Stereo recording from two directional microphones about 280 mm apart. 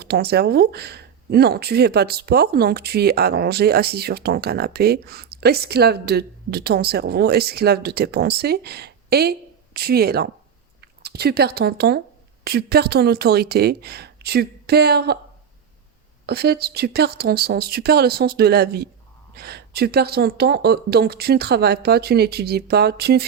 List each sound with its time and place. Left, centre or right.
0.0 s speech: right
16.2 s speech: right